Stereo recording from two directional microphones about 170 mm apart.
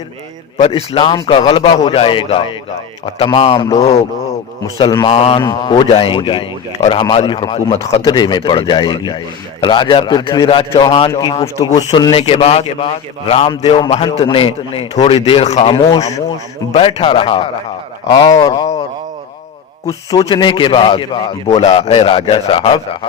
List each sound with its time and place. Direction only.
0.6 s a man's voice: 35° left (ahead or behind)
4.8 s a man's voice: 25° left (ahead or behind)
12.1 s a man's voice: 35° left (ahead or behind)
19.9 s a man's voice: 20° left (ahead or behind)